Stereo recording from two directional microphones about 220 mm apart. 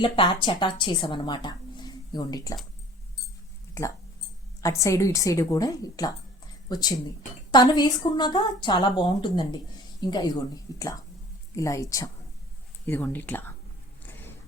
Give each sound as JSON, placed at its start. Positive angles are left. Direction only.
{"t": 0.0, "sound": "a woman's voice", "side_deg": 20}
{"t": 4.6, "sound": "a woman's voice", "side_deg": 15}